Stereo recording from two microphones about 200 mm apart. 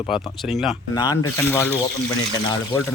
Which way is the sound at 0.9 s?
20° left (ahead or behind).